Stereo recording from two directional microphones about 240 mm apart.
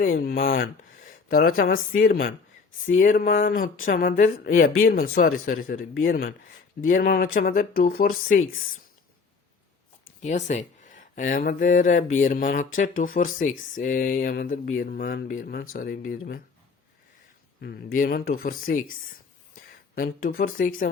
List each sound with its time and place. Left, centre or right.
0.0 s speech: left
10.2 s speech: left
17.6 s speech: left